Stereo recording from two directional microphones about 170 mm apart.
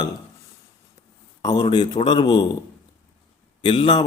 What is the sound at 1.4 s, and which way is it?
A man's voice, 25° left (ahead or behind).